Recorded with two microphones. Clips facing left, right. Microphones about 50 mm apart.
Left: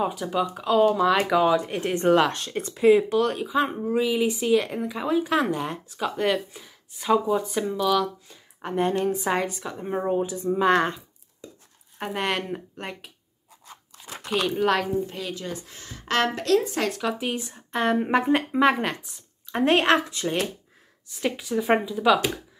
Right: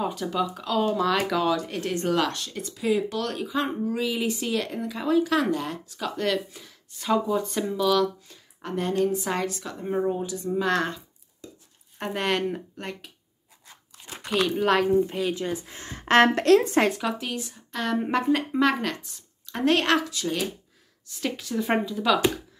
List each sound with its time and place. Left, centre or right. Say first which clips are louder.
0.0 s speech: left 2 dB; centre; by 3.0 s left
3.0 s speech: left 5 dB; centre
8.5 s speech: left 1 dB; left
10.0 s speech: left 3 dB; left
12.0 s speech: right 1 dB; centre
14.3 s speech: even; centre
15.0 s a woman's voice: right 5 dB; centre; by 16.3 s right
16.3 s a woman's voice: right 4 dB; right
17.4 s speech: left 5 dB; left
18.0 s speech: left 2 dB; centre
21.2 s speech: left 2 dB; centre